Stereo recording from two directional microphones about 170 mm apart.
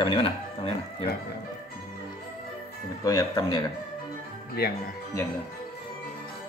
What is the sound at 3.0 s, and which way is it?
Speech, 20° left (ahead or behind).